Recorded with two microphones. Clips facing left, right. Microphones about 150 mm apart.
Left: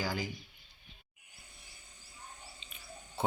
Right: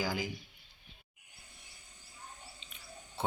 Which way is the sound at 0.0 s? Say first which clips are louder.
Right 1 dB; 10° right (ahead or behind).